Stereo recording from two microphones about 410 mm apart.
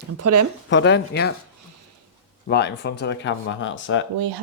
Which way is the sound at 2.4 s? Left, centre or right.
Left.